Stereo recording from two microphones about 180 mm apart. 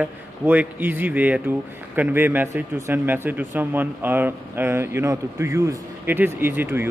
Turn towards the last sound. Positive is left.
turn(degrees=-10)  # may be behind; listen again after turning